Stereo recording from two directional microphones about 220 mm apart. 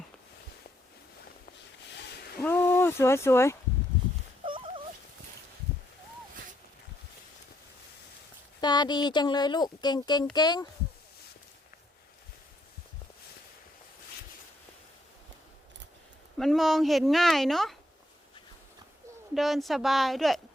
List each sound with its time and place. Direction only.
2.4 s speech: 10° left (ahead or behind)
4.4 s a sound: 25° right (ahead or behind)
8.6 s speech: 20° left (ahead or behind)
16.4 s speech: centre (ahead or behind)
19.3 s speech: centre (ahead or behind)